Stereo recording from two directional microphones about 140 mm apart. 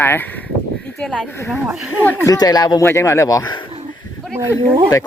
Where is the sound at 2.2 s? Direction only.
25° left (ahead or behind).